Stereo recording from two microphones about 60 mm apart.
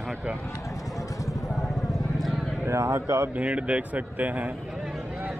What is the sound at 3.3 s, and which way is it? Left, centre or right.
A man's voice, right.